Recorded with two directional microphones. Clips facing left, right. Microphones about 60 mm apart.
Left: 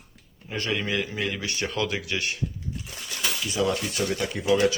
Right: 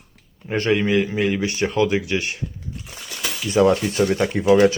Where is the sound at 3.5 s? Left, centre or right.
Right.